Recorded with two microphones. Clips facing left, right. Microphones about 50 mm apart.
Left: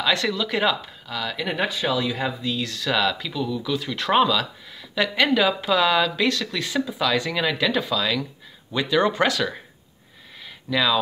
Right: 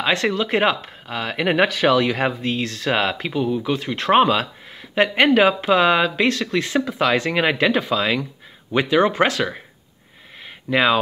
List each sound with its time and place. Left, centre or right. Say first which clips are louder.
0.0 s speech: right 3 dB; right
1.7 s speech: right 7 dB; right
10.7 s speech: right 4 dB; right